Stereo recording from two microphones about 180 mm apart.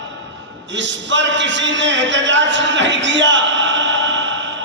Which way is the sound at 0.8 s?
85° right.